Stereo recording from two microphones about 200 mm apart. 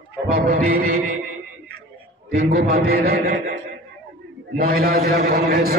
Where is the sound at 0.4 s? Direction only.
45° right (ahead or behind).